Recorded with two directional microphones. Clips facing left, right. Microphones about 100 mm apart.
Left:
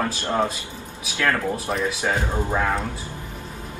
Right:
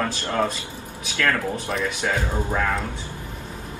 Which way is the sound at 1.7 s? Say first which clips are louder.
Left 1 dB; centre (ahead or behind).